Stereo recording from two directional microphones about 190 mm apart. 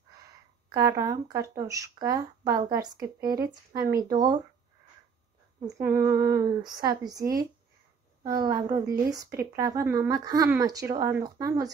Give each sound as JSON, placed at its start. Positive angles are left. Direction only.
{"t": 0.7, "sound": "speech", "side_deg": -20}
{"t": 5.8, "sound": "speech", "side_deg": -15}